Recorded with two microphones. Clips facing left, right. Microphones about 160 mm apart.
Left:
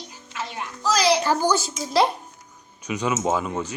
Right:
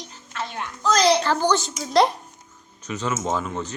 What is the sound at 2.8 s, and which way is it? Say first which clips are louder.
Speech: left 2 dB; 10° left (ahead or behind).